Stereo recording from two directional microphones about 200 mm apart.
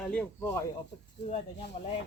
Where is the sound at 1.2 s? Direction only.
30° left (ahead or behind).